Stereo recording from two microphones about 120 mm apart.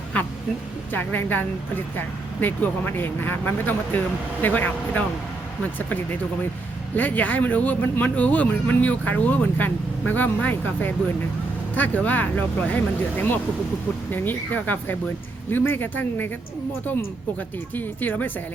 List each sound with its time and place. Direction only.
0.9 s speech: 15° left (ahead or behind)
6.9 s speech: 15° left (ahead or behind)
17.7 s speech: 15° left (ahead or behind)